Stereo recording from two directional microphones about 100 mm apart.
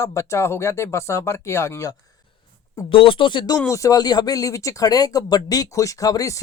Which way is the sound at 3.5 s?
30° left (ahead or behind).